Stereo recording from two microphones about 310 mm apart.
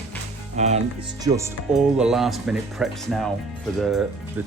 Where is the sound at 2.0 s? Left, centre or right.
Centre.